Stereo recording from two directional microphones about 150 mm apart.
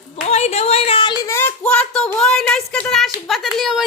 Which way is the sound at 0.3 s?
45° left (ahead or behind).